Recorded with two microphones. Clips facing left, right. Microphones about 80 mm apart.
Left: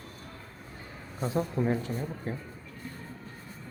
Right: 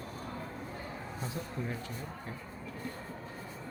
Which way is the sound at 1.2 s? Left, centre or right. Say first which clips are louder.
Left 12 dB; left.